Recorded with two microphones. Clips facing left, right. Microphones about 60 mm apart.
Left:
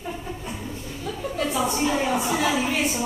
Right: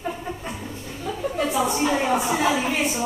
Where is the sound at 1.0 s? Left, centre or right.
Centre.